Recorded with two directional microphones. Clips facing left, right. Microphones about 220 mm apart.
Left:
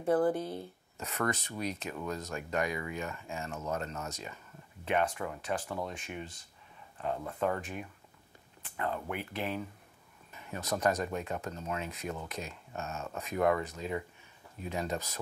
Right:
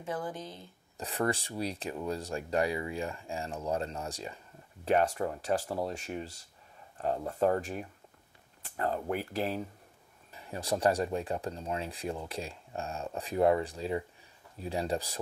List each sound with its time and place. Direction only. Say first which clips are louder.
0.0 s speech: left 9 dB; 55° left (ahead or behind)
0.9 s speech: right 2 dB; 30° right (ahead or behind)